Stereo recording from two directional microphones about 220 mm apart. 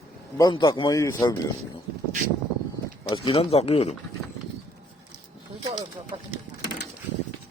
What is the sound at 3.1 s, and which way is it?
Speech, 25° left (ahead or behind).